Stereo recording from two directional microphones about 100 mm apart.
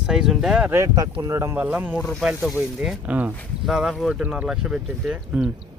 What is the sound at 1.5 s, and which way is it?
Speech, 20° right (ahead or behind).